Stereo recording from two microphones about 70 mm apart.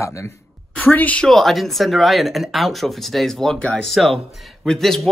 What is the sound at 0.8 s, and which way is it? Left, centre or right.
Speech, left.